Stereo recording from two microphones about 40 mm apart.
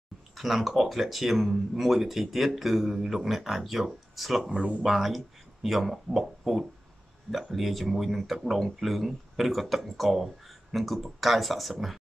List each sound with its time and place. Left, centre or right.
0.4 s speech: centre
4.5 s speech: right
4.8 s speech: centre